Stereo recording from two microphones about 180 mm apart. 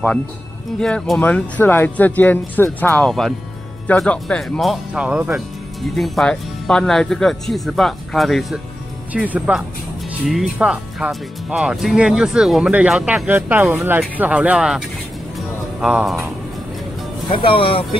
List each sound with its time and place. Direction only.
0.7 s speech: 5° left (ahead or behind)
15.3 s music: 5° right (ahead or behind)
17.3 s speech: 30° left (ahead or behind)